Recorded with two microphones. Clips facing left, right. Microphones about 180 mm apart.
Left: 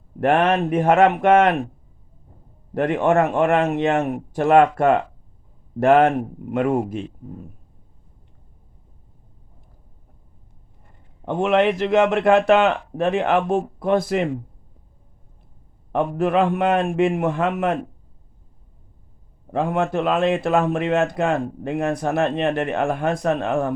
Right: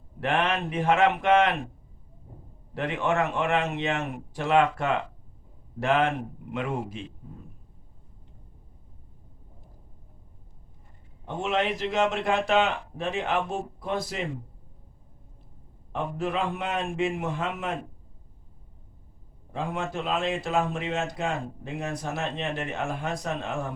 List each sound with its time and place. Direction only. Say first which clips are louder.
0.2 s a man's voice: left 9 dB; 50° left (ahead or behind)
2.7 s a man's voice: left 9 dB; 50° left (ahead or behind)
11.3 s speech: left 9 dB; 60° left (ahead or behind)
15.9 s speech: left 9 dB; 60° left (ahead or behind)
19.5 s speech: left 10 dB; 60° left (ahead or behind)